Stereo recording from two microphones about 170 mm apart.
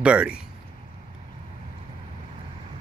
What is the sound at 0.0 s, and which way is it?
Speech, 5° right (ahead or behind).